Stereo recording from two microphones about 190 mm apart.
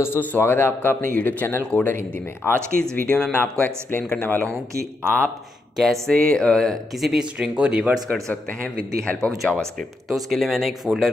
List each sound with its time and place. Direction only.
0.0 s speech: 10° left (ahead or behind)
5.8 s speech: centre (ahead or behind)